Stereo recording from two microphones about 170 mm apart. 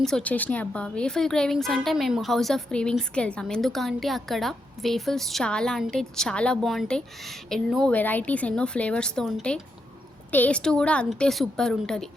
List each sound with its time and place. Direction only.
0.0 s a woman's voice: 5° left (ahead or behind)